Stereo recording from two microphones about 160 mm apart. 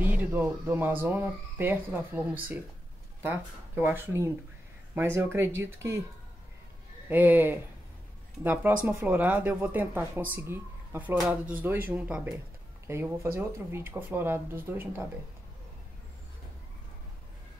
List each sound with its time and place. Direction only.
0.0 s speech: 10° right (ahead or behind)
7.1 s speech: 10° right (ahead or behind)
8.8 s speech: 10° right (ahead or behind)